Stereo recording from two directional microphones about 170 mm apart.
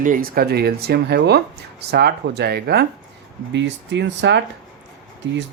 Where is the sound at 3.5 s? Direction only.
90° right.